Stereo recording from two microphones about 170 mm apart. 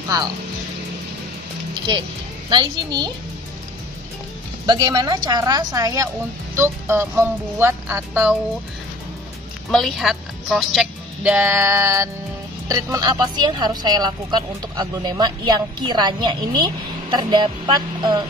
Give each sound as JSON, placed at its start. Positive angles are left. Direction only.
{"t": 2.5, "sound": "speech", "side_deg": -25}
{"t": 4.6, "sound": "speech", "side_deg": -25}
{"t": 9.7, "sound": "speech", "side_deg": 0}